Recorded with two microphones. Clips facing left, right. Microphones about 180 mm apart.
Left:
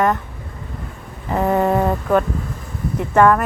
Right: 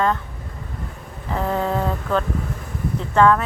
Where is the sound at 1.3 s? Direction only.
60° left (ahead or behind).